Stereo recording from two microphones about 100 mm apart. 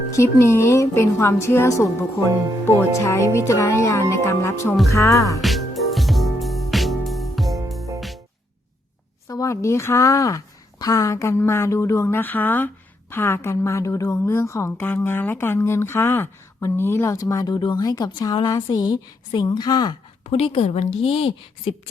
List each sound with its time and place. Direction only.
0.2 s a woman's voice: 30° left (ahead or behind)
3.0 s a woman's voice: 30° left (ahead or behind)
4.9 s music: 35° left (ahead or behind)
5.4 s music: centre (ahead or behind)
9.2 s a woman's voice: 30° left (ahead or behind)
20.3 s a woman's voice: 70° left (ahead or behind)